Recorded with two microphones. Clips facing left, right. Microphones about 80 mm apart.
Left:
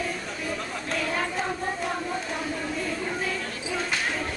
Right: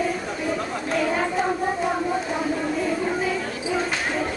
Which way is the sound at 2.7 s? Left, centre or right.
Centre.